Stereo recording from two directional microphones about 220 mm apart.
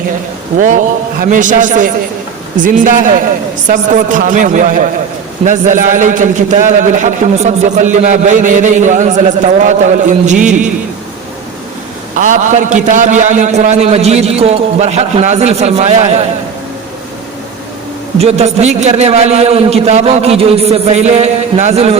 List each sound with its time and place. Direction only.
1.2 s a man's voice: 35° right (ahead or behind)
12.1 s a man's voice: 35° right (ahead or behind)
18.2 s a man's voice: 30° right (ahead or behind)